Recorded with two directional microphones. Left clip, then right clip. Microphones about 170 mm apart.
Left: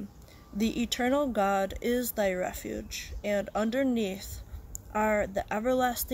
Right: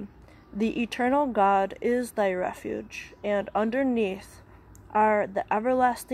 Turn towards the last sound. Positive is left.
turn(degrees=10)  # may be behind; listen again after turning